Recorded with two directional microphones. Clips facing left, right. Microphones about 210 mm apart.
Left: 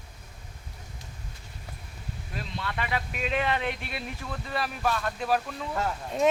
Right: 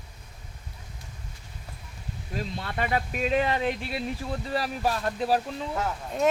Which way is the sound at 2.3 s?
40° right (ahead or behind).